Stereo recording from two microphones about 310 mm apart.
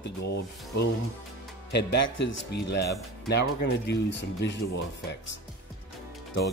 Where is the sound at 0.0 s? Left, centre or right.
Left.